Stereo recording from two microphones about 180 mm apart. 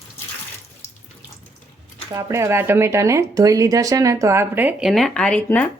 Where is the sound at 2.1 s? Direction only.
20° right (ahead or behind).